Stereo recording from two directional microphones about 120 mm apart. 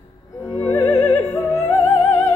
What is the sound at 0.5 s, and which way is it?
Music, 25° left (ahead or behind).